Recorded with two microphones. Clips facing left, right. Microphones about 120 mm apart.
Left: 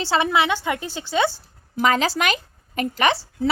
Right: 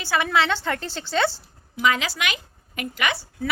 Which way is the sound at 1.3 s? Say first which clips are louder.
Left 4 dB; 40° left (ahead or behind).